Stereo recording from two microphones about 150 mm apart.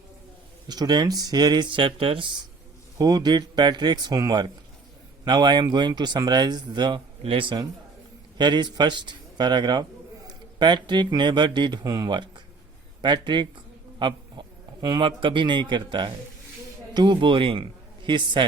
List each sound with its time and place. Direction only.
0.7 s a man's voice: 25° right (ahead or behind)